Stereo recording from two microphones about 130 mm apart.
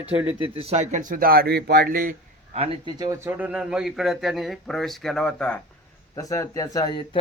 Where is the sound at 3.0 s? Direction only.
20° right (ahead or behind).